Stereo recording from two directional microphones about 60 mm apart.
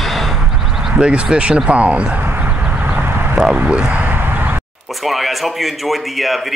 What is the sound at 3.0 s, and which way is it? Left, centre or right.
Clip-clop, right.